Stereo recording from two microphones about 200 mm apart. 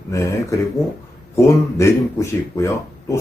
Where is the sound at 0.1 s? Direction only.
15° left (ahead or behind).